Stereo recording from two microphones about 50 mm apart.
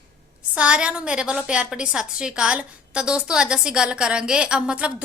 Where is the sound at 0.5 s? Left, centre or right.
Right.